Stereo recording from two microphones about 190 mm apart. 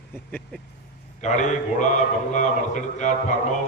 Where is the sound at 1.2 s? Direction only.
40° left (ahead or behind).